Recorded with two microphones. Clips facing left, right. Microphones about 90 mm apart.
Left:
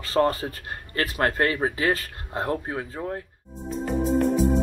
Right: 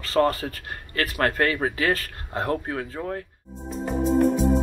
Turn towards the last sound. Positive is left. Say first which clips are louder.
# right 1 dB
turn(degrees=0)  # may be behind; listen again after turning